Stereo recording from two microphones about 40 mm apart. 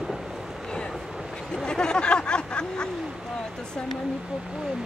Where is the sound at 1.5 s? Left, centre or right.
Centre.